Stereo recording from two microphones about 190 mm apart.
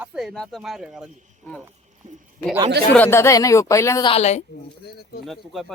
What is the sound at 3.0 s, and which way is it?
Speech, 10° left (ahead or behind).